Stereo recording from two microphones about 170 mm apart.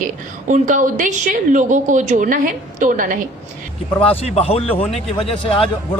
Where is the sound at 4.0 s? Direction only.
35° left (ahead or behind).